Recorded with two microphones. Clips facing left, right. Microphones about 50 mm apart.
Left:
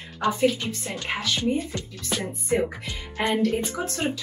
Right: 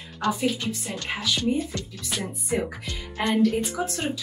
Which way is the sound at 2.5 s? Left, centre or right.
Centre.